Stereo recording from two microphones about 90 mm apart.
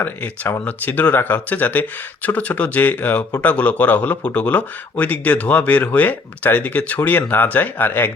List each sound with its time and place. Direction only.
0.0 s speech: 20° left (ahead or behind)